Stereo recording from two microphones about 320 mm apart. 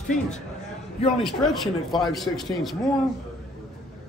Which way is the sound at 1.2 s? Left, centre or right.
Centre.